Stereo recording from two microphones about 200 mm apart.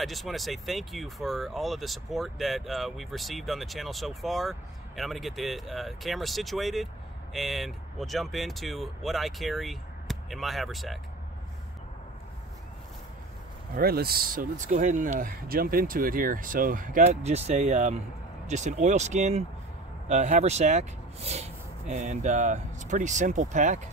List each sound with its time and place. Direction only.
0.0 s speech: centre (ahead or behind)
13.7 s speech: 50° right (ahead or behind)